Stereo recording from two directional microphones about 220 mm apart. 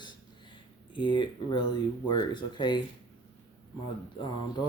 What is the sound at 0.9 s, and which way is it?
Speech, 20° left (ahead or behind).